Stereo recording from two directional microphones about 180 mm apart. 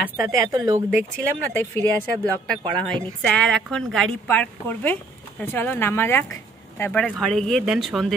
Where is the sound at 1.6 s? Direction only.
10° left (ahead or behind).